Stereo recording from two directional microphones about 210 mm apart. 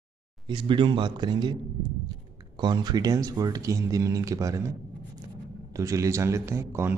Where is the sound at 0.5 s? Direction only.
25° right (ahead or behind).